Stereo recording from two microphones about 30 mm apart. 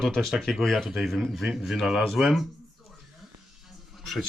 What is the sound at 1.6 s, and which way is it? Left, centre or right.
Speech, centre.